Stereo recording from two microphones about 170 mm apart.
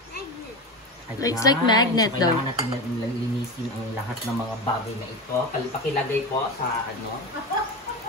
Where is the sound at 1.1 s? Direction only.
20° left (ahead or behind).